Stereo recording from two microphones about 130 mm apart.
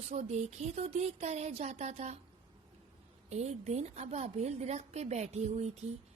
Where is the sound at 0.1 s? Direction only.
60° right (ahead or behind).